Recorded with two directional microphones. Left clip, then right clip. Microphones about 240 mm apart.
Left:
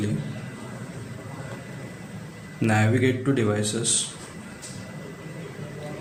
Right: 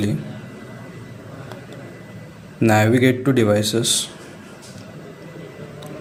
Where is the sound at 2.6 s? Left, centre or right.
Right.